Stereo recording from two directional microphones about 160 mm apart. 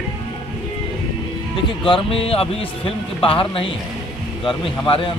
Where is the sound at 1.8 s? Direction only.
35° left (ahead or behind).